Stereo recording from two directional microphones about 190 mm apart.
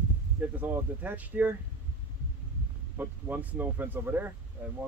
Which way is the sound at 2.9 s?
10° right (ahead or behind).